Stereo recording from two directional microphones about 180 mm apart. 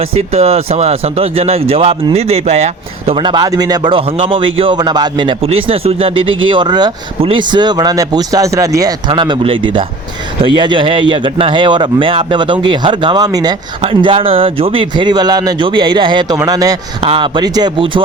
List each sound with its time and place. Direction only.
0.0 s speech: 35° right (ahead or behind); by 16.7 s 20° right (ahead or behind)
17.0 s speech: 30° right (ahead or behind)